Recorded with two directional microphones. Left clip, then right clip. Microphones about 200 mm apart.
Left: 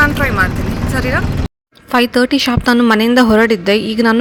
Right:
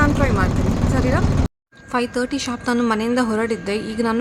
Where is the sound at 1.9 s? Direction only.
35° left (ahead or behind).